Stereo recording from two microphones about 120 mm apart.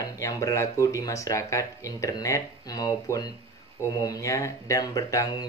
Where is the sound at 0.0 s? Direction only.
30° left (ahead or behind).